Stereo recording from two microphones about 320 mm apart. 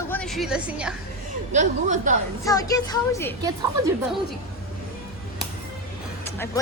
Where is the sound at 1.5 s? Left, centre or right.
Right.